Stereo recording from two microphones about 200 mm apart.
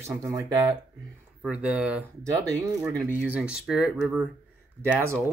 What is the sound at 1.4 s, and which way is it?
Speech, 5° right (ahead or behind).